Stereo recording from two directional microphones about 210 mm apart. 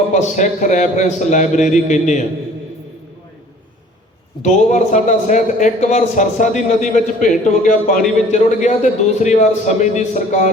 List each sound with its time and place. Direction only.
0.1 s a man's voice: 35° left (ahead or behind)
4.4 s a man's voice: 35° left (ahead or behind)